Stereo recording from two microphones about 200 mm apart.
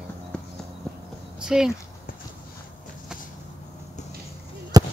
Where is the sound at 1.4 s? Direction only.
5° right (ahead or behind).